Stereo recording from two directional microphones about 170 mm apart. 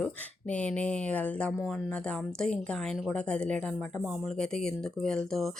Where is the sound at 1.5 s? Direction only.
5° right (ahead or behind).